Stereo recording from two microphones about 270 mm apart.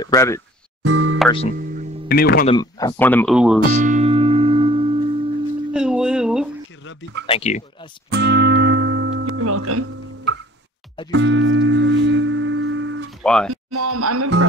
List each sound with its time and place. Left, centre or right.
0.0 s speech: centre
0.8 s music: right
2.0 s speech: left
2.4 s speech: centre
3.7 s music: right
5.7 s a sound: centre
6.8 s a sound: left
7.2 s speech: left
8.1 s music: right
11.1 s music: right
13.2 s speech: centre
13.7 s speech: right